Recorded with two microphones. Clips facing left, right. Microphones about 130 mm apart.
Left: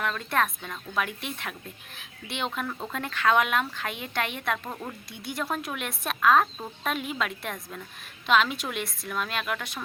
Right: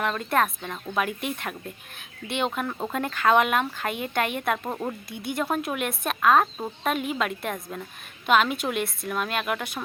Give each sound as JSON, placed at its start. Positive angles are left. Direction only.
{"t": 0.0, "sound": "speech", "side_deg": -5}
{"t": 4.7, "sound": "speech", "side_deg": -25}
{"t": 5.1, "sound": "speech", "side_deg": 0}